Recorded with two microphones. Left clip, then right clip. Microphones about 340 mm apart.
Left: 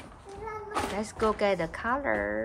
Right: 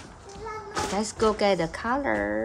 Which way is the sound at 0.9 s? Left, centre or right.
Centre.